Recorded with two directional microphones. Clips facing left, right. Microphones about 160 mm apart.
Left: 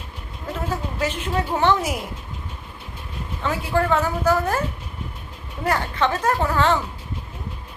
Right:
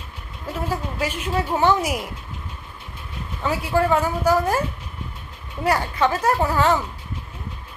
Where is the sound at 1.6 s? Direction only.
10° right (ahead or behind).